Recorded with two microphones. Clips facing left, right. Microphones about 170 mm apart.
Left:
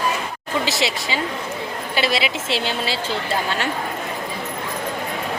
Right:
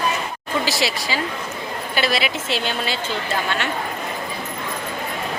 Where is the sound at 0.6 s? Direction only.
25° left (ahead or behind).